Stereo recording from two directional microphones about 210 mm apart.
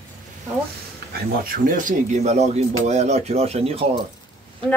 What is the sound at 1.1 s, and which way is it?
Speech, 45° right (ahead or behind).